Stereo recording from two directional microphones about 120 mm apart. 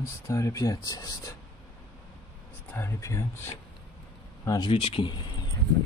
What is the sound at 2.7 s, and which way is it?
Speech, 15° left (ahead or behind).